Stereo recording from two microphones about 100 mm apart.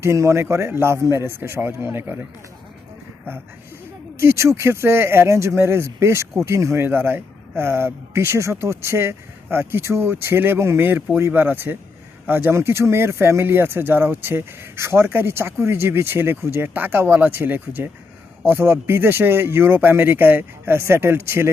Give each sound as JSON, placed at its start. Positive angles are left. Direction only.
{"t": 0.0, "sound": "speech", "side_deg": -30}
{"t": 4.2, "sound": "speech", "side_deg": -30}